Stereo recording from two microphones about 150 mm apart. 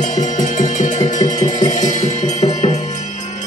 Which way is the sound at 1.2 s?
25° left (ahead or behind).